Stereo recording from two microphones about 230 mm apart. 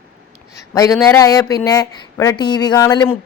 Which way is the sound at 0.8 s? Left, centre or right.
Centre.